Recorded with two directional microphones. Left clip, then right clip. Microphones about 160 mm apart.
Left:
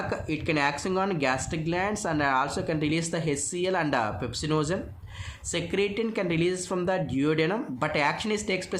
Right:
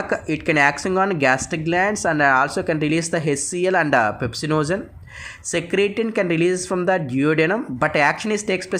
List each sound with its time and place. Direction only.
0.1 s speech: 35° right (ahead or behind)